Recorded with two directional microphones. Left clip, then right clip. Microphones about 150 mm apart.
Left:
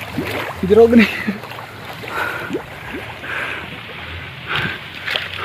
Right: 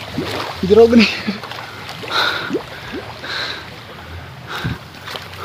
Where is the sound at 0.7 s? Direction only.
15° right (ahead or behind).